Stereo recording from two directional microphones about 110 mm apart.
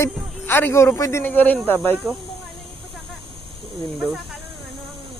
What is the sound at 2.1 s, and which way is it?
Speech, 5° left (ahead or behind).